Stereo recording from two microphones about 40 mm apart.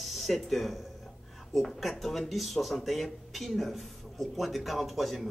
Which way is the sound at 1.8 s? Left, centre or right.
Centre.